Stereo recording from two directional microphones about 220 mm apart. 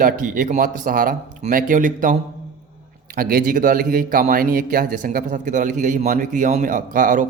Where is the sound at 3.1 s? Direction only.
40° right (ahead or behind).